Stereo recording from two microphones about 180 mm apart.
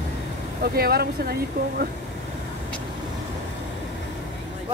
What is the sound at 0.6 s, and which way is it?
Speech, 60° right (ahead or behind).